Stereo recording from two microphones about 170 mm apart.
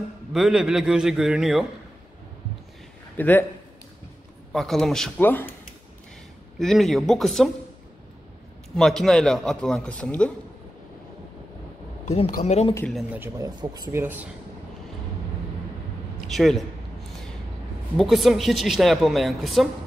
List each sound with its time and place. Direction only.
0.3 s a woman's voice: centre (ahead or behind)
3.2 s a man's voice: 10° left (ahead or behind)
4.5 s a woman's voice: centre (ahead or behind)
6.6 s a woman's voice: centre (ahead or behind)
8.7 s a woman's voice: centre (ahead or behind)
12.3 s speech: 40° left (ahead or behind)
12.9 s speech: 10° right (ahead or behind)
13.4 s speech: 20° right (ahead or behind)
14.0 s speech: 10° right (ahead or behind)
16.3 s a man's voice: centre (ahead or behind)
17.9 s a woman's voice: centre (ahead or behind)